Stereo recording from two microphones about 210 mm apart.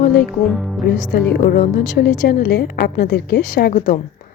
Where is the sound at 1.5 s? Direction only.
45° left (ahead or behind).